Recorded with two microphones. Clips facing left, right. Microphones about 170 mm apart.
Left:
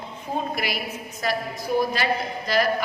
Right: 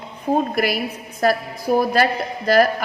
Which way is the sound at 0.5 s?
45° right (ahead or behind).